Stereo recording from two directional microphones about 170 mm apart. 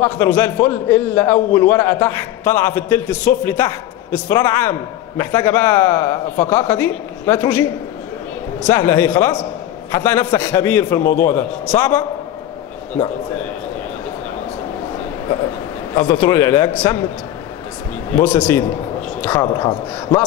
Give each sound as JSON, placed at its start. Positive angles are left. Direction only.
{"t": 0.0, "sound": "a man's voice", "side_deg": 15}
{"t": 8.6, "sound": "a man's voice", "side_deg": 15}
{"t": 15.9, "sound": "a man's voice", "side_deg": 25}
{"t": 18.1, "sound": "a man's voice", "side_deg": 10}